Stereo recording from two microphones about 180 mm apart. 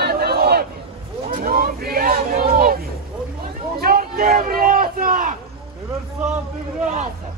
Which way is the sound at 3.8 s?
55° right (ahead or behind).